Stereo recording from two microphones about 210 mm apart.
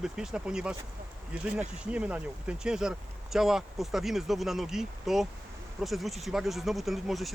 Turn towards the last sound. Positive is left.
turn(degrees=0)  # may be behind; listen again after turning